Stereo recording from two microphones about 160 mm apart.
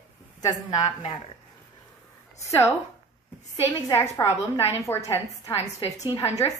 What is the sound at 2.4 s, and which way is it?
Speech, 20° left (ahead or behind).